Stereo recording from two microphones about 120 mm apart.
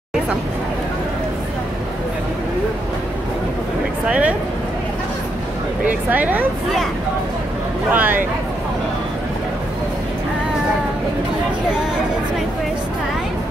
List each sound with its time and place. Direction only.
4.1 s speech: 10° right (ahead or behind)
5.9 s speech: 15° right (ahead or behind)
7.9 s speech: 15° right (ahead or behind)